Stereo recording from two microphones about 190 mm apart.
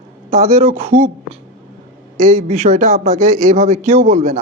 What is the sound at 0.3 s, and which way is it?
Speech, 35° right (ahead or behind).